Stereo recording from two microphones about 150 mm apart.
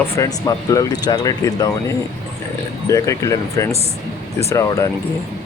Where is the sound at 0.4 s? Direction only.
25° left (ahead or behind).